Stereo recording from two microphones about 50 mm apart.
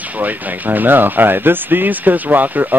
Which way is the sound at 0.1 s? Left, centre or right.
Right.